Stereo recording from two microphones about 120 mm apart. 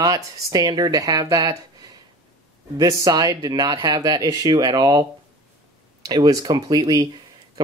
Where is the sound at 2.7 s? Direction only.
30° right (ahead or behind).